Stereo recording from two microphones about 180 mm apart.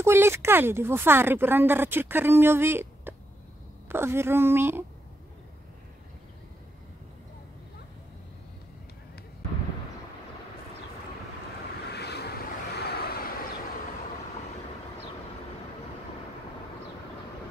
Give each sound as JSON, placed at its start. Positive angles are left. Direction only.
{"t": 0.0, "sound": "speech", "side_deg": -15}
{"t": 11.9, "sound": "vehicle", "side_deg": 65}